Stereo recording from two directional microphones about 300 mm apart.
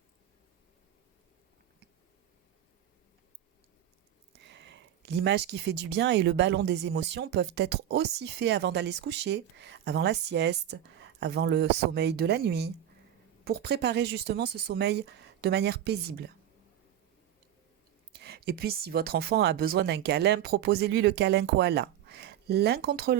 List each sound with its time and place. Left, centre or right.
4.4 s speech: right
18.1 s speech: right